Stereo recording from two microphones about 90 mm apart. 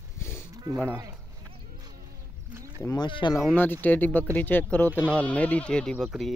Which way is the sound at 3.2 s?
55° left (ahead or behind).